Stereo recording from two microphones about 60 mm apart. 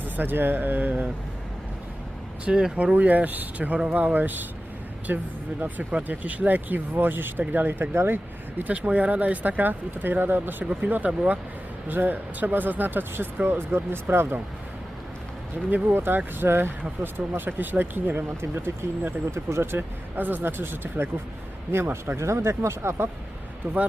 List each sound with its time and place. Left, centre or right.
0.0 s speech: right
2.4 s speech: centre; by 8.7 s right
8.7 s speech: right
15.7 s speech: right
20.1 s speech: right
22.2 s speech: right